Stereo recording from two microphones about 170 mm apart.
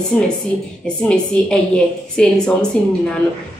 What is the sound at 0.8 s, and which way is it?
A woman's voice, 5° left (ahead or behind).